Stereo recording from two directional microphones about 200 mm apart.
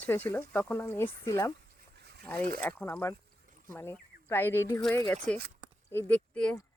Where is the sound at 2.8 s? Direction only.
15° left (ahead or behind).